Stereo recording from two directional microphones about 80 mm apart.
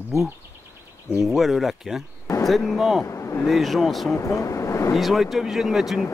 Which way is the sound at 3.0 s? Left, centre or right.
Left.